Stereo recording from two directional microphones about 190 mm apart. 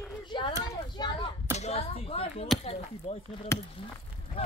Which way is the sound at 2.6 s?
30° left (ahead or behind).